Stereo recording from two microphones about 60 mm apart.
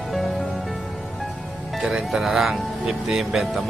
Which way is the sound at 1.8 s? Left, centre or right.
Centre.